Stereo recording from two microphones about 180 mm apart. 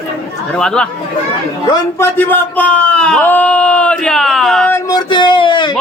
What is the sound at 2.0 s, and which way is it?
A man's voice, 10° left (ahead or behind).